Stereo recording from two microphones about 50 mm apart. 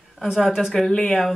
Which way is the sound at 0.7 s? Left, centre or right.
Centre.